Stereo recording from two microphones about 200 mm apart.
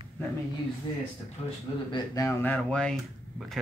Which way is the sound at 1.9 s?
15° left (ahead or behind).